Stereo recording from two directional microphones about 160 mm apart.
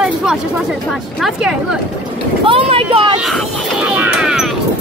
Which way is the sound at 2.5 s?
35° right (ahead or behind).